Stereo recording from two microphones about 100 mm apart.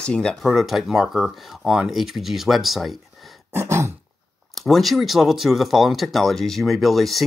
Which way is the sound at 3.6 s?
25° right (ahead or behind).